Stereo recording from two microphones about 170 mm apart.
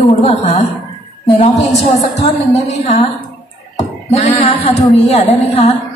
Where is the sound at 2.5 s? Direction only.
40° left (ahead or behind).